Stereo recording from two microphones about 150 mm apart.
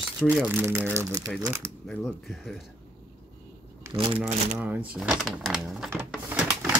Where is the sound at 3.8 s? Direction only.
30° right (ahead or behind).